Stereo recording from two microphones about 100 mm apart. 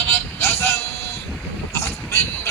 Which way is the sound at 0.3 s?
25° left (ahead or behind).